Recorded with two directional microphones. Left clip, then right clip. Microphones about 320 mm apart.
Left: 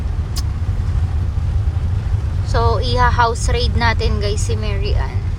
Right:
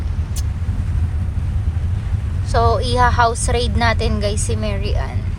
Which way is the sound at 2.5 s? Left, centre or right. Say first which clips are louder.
Right 2 dB; centre.